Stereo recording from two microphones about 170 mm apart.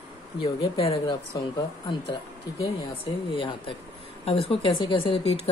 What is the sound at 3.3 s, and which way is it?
Speech, 30° left (ahead or behind).